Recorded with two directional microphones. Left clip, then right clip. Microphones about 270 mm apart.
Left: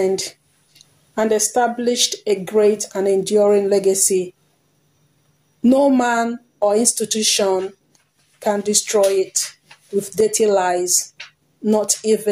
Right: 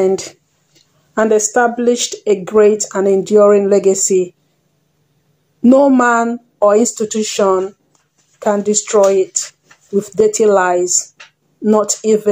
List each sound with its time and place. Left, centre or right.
0.0 s speech: right
5.6 s speech: right